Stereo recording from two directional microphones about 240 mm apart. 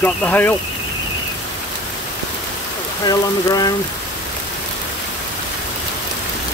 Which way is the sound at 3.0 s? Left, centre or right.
Centre.